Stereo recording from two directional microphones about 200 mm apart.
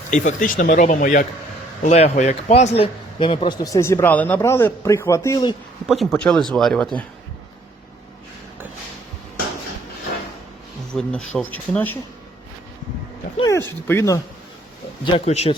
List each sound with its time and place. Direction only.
0.1 s a man's voice: 40° left (ahead or behind); by 5.5 s 20° left (ahead or behind)
5.8 s speech: centre (ahead or behind)
10.9 s speech: 5° left (ahead or behind)
13.5 s a man's voice: 10° left (ahead or behind)
15.0 s speech: 30° left (ahead or behind)